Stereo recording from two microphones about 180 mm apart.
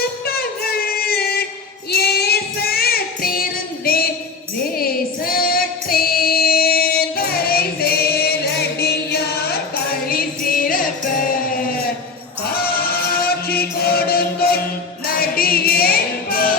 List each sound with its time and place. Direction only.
0.3 s music: 60° left (ahead or behind)
1.9 s child singing: 60° left (ahead or behind)
3.8 s a sound: 55° left (ahead or behind)
4.8 s singing: 55° left (ahead or behind)
12.5 s music: 55° left (ahead or behind)